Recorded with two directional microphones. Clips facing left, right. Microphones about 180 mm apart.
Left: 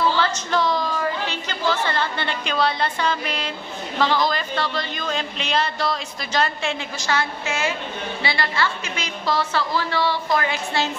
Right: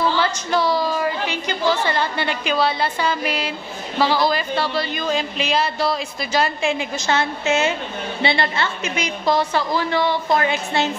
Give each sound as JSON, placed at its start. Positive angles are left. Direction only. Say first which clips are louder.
{"t": 0.2, "sound": "a woman's voice", "louder": "right 2 dB", "side_deg": -10}
{"t": 7.1, "sound": "a woman's voice", "louder": "right 4 dB", "side_deg": -25}